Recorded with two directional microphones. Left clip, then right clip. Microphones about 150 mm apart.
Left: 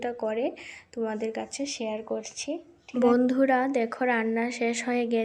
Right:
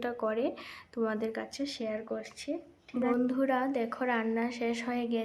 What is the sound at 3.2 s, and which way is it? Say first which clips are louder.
A woman's voice: left 6 dB; 30° left (ahead or behind).